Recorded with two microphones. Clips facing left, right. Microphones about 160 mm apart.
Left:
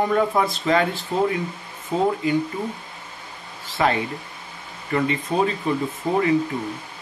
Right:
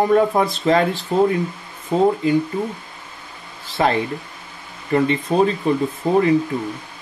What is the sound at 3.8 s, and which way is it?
Speech, 35° right (ahead or behind).